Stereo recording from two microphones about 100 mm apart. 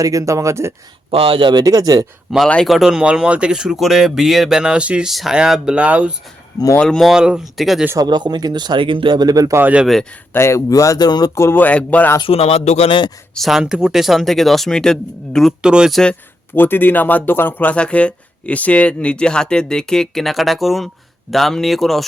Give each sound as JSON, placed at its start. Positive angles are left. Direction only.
{"t": 0.0, "sound": "speech", "side_deg": -35}
{"t": 1.1, "sound": "speech", "side_deg": -65}
{"t": 1.6, "sound": "speech", "side_deg": -35}
{"t": 2.3, "sound": "speech", "side_deg": 0}
{"t": 6.7, "sound": "speech", "side_deg": 5}
{"t": 7.9, "sound": "speech", "side_deg": -45}
{"t": 9.6, "sound": "speech", "side_deg": -15}
{"t": 9.8, "sound": "speech", "side_deg": 5}
{"t": 10.3, "sound": "speech", "side_deg": 30}
{"t": 11.3, "sound": "speech", "side_deg": 20}
{"t": 12.2, "sound": "speech", "side_deg": 85}
{"t": 13.3, "sound": "speech", "side_deg": 0}
{"t": 15.6, "sound": "speech", "side_deg": -10}
{"t": 16.6, "sound": "speech", "side_deg": 20}